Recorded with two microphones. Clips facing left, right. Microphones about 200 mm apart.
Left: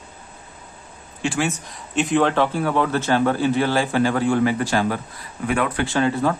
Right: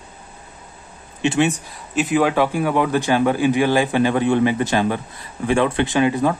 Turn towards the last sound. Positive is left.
turn(degrees=-15)  # may be behind; listen again after turning